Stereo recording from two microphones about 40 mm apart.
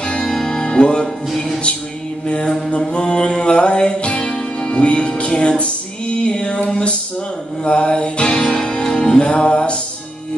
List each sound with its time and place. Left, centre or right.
0.0 s music: left
1.0 s music: centre
2.2 s mantra: left
2.9 s music: left